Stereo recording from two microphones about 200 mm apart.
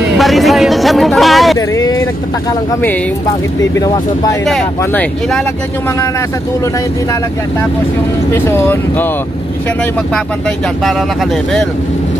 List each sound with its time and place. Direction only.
0.2 s speech: centre (ahead or behind)
3.7 s speech: 15° left (ahead or behind)
4.5 s speech: centre (ahead or behind)
8.3 s speech: 10° left (ahead or behind)